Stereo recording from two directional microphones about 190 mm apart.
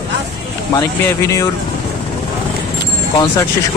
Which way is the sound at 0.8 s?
15° left (ahead or behind).